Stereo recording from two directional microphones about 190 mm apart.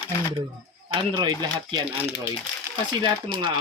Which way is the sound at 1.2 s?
20° right (ahead or behind).